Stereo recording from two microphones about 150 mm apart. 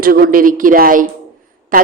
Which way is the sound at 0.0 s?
75° right (ahead or behind).